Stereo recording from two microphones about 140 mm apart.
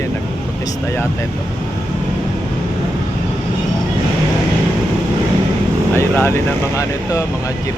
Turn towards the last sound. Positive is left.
turn(degrees=20)  # may be behind; listen again after turning